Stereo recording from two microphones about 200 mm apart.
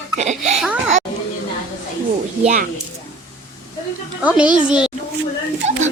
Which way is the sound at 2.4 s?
35° right (ahead or behind).